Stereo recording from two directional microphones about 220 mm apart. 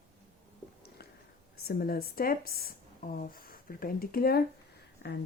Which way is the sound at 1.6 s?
45° left (ahead or behind).